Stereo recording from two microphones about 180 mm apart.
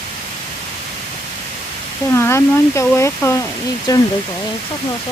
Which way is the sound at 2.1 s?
15° left (ahead or behind).